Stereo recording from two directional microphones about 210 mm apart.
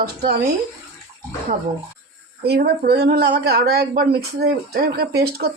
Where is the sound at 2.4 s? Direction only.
50° right (ahead or behind).